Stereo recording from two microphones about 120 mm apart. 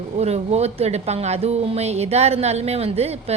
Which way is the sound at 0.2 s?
60° right (ahead or behind).